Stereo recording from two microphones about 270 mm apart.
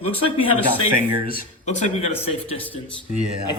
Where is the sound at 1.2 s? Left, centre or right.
Left.